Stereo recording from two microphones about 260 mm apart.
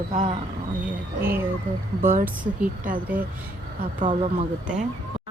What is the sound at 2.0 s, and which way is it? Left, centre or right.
Speech, right.